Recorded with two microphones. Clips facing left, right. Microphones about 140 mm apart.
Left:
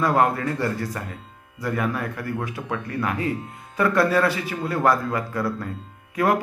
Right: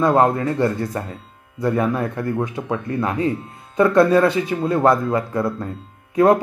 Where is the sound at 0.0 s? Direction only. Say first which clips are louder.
Right 4 dB; 25° right (ahead or behind).